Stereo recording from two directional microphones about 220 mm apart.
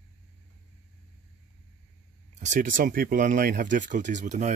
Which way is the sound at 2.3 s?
35° right (ahead or behind).